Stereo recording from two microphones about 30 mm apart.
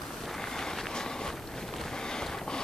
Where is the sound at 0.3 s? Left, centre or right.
Centre.